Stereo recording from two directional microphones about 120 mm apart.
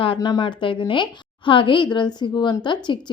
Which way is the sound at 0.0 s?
40° left (ahead or behind).